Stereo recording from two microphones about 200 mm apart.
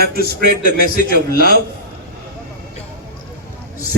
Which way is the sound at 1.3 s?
50° right (ahead or behind).